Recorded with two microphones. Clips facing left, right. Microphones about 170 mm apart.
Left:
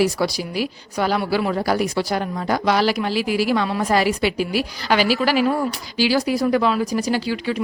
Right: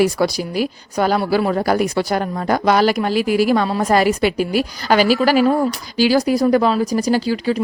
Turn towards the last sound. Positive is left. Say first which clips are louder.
# right 4 dB
turn(degrees=-40)  # may be behind; listen again after turning